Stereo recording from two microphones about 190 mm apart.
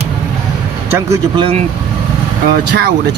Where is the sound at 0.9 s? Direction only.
15° right (ahead or behind).